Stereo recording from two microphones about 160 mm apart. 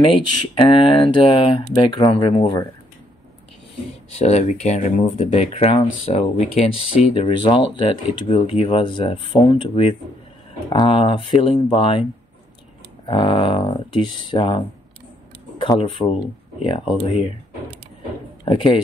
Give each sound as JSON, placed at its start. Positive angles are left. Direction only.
{"t": 0.7, "sound": "speech", "side_deg": 35}
{"t": 4.2, "sound": "speech", "side_deg": 45}
{"t": 13.0, "sound": "speech", "side_deg": 35}
{"t": 15.6, "sound": "speech", "side_deg": 30}
{"t": 18.4, "sound": "speech", "side_deg": 35}